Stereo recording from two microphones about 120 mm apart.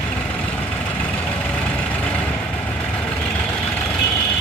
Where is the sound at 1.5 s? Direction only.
10° left (ahead or behind).